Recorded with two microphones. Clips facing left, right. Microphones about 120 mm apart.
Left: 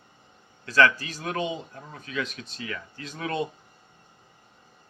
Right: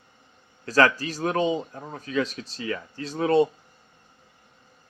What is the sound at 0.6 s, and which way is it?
Speech, 40° right (ahead or behind).